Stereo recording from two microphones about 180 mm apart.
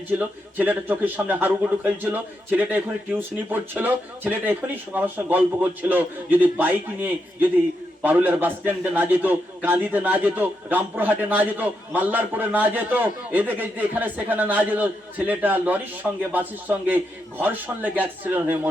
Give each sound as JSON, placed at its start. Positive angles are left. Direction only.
{"t": 0.2, "sound": "a man's voice", "side_deg": -10}